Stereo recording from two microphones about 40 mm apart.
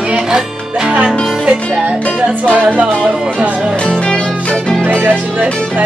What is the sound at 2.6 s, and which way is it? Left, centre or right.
Music, right.